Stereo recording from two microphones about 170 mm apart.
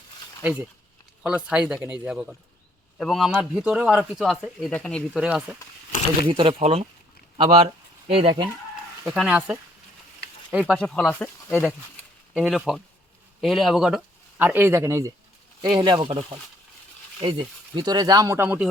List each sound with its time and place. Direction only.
0.4 s speech: 5° right (ahead or behind)
6.2 s speech: 30° right (ahead or behind)
9.1 s speech: 5° right (ahead or behind)
15.6 s speech: 25° right (ahead or behind)